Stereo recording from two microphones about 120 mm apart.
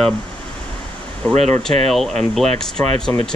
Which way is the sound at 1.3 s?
65° right (ahead or behind).